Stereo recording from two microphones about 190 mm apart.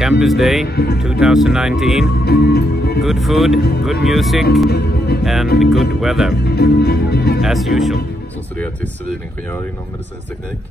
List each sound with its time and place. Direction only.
0.2 s speech: centre (ahead or behind)
0.7 s music: 55° left (ahead or behind)
1.2 s speech: centre (ahead or behind)
2.1 s music: 55° left (ahead or behind)
3.0 s speech: centre (ahead or behind)
4.6 s speech: 55° left (ahead or behind)
5.2 s speech: centre (ahead or behind)
6.3 s speech: 55° left (ahead or behind)
7.4 s speech: centre (ahead or behind)